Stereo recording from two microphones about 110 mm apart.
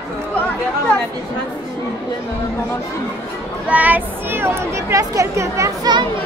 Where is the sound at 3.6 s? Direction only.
15° right (ahead or behind).